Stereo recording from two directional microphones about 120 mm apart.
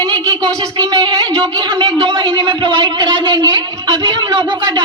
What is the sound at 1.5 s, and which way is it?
A man's voice, 40° right (ahead or behind).